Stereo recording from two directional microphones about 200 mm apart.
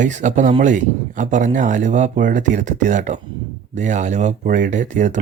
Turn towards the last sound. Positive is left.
turn(degrees=-40)  # may be behind; listen again after turning